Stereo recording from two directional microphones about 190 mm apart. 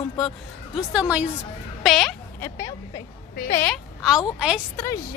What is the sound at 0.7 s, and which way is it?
A woman's voice, 5° right (ahead or behind).